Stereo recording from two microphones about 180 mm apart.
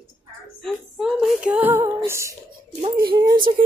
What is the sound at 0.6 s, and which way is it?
Female singing, centre (ahead or behind).